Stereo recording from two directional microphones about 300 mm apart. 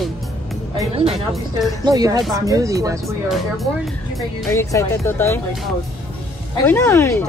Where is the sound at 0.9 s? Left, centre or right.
Centre.